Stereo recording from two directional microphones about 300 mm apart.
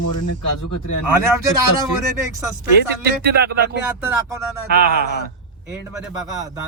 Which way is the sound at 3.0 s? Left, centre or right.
Right.